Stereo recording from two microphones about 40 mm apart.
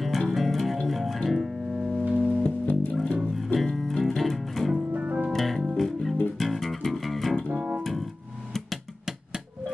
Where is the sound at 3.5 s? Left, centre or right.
Centre.